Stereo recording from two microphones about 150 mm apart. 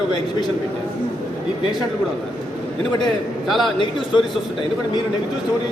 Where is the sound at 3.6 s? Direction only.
30° left (ahead or behind).